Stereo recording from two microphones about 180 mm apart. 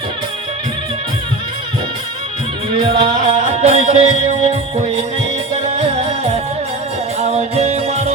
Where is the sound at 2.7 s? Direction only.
30° right (ahead or behind).